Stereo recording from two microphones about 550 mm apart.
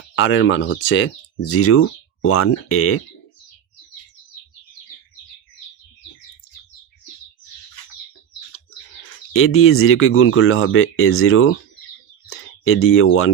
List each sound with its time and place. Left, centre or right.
0.2 s speech: left
9.3 s speech: left